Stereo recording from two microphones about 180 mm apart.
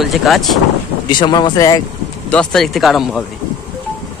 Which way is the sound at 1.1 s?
25° left (ahead or behind).